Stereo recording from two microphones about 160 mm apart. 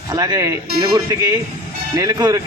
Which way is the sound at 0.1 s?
25° right (ahead or behind).